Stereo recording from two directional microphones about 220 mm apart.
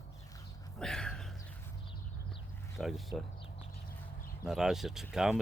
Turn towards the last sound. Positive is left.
turn(degrees=0)  # may be behind; listen again after turning